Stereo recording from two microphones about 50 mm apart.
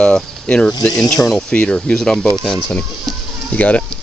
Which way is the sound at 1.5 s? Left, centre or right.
Left.